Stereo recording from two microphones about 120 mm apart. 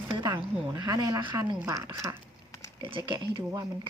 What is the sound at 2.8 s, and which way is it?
Speech, 45° right (ahead or behind).